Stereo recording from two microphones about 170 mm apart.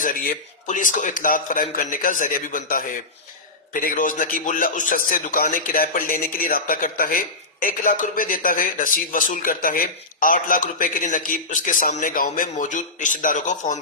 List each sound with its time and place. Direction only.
0.0 s a man's voice: 55° left (ahead or behind)